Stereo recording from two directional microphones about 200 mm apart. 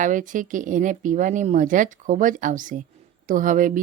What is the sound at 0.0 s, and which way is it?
A woman's voice, 40° right (ahead or behind).